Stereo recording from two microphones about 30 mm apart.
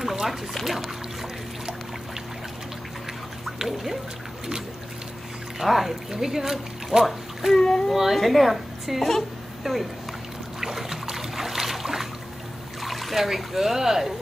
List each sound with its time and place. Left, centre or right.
0.0 s boat: centre
3.5 s a sound: centre
5.6 s a child's voice: centre
7.5 s speech: left
7.9 s a woman's voice: centre
9.6 s speech: centre
10.6 s a sound: centre
12.8 s speech: centre